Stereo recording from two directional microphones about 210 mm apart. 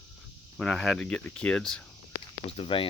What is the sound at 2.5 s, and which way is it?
Speech, 25° left (ahead or behind).